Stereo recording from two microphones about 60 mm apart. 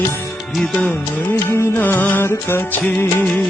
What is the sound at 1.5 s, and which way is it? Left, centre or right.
Music, left.